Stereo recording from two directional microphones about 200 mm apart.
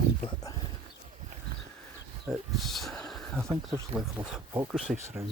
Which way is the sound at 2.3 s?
Centre (ahead or behind).